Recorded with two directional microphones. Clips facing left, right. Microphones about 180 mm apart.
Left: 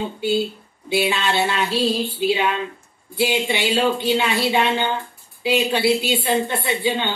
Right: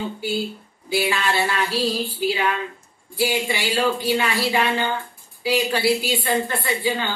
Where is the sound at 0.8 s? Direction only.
25° left (ahead or behind).